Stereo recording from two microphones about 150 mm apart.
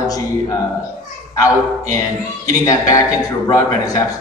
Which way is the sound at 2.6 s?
20° left (ahead or behind).